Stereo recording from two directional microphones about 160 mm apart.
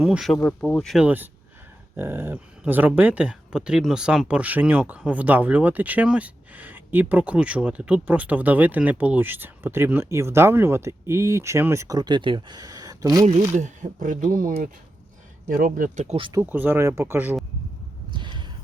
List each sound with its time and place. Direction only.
0.0 s speech: 5° right (ahead or behind)
0.3 s speech: 10° left (ahead or behind)
1.0 s speech: 10° right (ahead or behind)
13.5 s speech: 50° right (ahead or behind)
16.0 s speech: 35° right (ahead or behind)
16.3 s speech: 10° right (ahead or behind)
18.1 s a sound: 30° right (ahead or behind)